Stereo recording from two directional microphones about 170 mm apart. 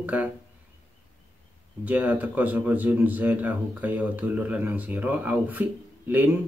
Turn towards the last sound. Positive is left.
turn(degrees=-10)  # may be behind; listen again after turning